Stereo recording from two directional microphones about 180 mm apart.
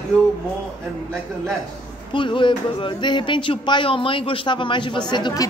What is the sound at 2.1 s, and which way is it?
A woman's voice, 25° left (ahead or behind).